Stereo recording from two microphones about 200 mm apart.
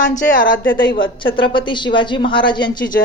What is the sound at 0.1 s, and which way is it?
Speech, 40° left (ahead or behind).